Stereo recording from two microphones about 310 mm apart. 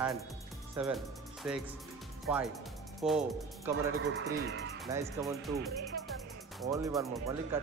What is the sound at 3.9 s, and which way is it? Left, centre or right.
Speech, right.